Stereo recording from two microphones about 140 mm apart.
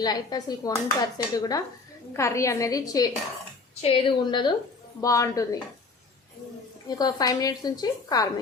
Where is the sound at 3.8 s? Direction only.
40° left (ahead or behind).